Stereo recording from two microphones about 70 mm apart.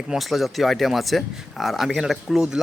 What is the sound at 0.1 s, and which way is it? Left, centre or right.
Speech, centre.